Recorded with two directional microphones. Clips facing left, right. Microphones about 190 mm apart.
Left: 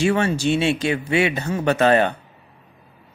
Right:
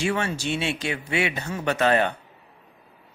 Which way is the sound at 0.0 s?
30° left (ahead or behind).